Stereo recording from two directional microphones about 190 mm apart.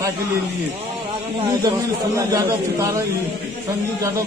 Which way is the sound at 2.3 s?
15° right (ahead or behind).